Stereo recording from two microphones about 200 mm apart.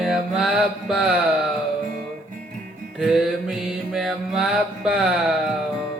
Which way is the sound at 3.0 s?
Centre (ahead or behind).